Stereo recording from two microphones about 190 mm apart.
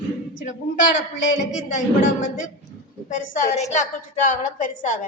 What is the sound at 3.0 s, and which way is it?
A woman's voice, 40° left (ahead or behind).